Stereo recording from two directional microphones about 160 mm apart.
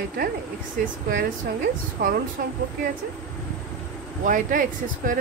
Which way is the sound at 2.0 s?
80° right.